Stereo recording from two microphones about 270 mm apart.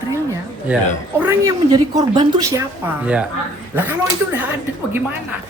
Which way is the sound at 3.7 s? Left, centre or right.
Centre.